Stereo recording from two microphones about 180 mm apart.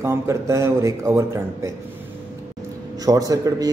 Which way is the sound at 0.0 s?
15° right (ahead or behind).